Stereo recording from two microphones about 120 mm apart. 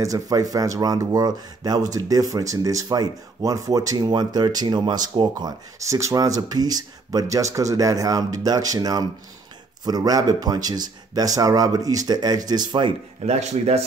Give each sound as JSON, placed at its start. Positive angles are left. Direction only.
{"t": 0.0, "sound": "speech", "side_deg": -30}
{"t": 5.9, "sound": "speech", "side_deg": -25}
{"t": 13.2, "sound": "speech", "side_deg": -65}